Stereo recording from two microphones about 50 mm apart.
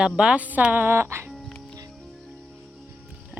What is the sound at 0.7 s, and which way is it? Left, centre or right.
Speech, right.